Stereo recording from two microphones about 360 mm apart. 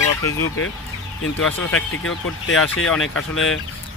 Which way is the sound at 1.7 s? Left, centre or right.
Left.